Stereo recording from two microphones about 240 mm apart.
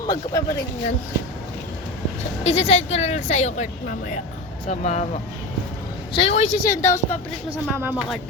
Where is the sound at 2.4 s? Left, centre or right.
Left.